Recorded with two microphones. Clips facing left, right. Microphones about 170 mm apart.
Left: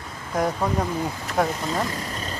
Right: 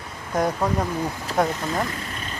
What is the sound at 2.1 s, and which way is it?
Vehicle, 35° left (ahead or behind).